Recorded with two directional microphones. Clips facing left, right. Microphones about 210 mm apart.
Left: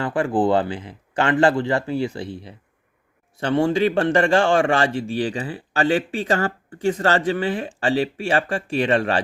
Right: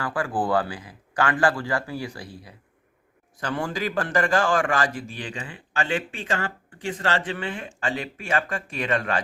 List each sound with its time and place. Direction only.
0.0 s a man's voice: 25° left (ahead or behind)